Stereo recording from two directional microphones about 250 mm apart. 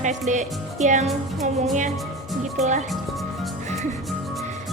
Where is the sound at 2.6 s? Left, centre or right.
Right.